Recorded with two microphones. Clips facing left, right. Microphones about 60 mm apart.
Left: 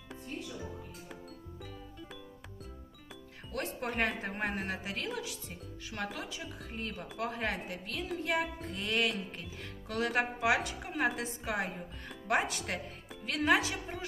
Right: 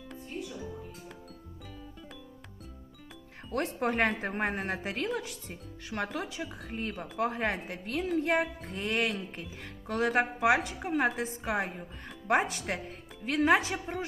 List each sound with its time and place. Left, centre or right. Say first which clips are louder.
3.8 s a woman's voice: right 5 dB; right